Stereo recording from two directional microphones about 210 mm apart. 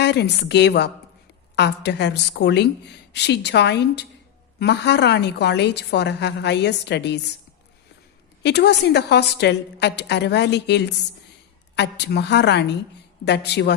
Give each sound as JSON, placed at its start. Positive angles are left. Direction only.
{"t": 0.0, "sound": "a woman's voice", "side_deg": 55}
{"t": 8.4, "sound": "a woman's voice", "side_deg": 55}